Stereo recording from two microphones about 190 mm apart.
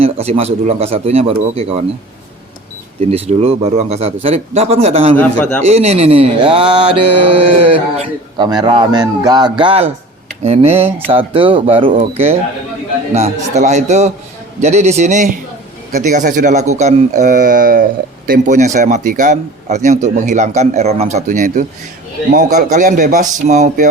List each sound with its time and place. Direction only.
0.0 s a man's voice: 30° right (ahead or behind)
3.1 s a man's voice: 30° right (ahead or behind)
5.1 s a man's voice: 10° left (ahead or behind)
5.6 s mantra: 35° right (ahead or behind)
10.4 s a man's voice: 35° right (ahead or behind)
11.1 s mantra: 30° right (ahead or behind)
11.9 s a man's voice: 35° right (ahead or behind)